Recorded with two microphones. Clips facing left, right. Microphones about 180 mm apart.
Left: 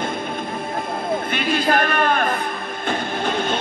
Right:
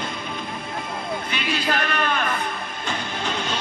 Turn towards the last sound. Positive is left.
turn(degrees=50)  # may be behind; listen again after turning